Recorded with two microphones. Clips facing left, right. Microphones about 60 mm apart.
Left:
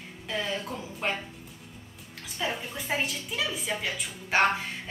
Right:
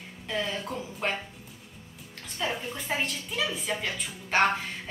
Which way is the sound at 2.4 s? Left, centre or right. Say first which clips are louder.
Right 1 dB; centre.